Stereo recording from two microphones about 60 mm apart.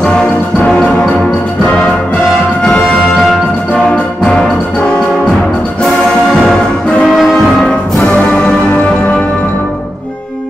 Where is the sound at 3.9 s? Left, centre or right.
Centre.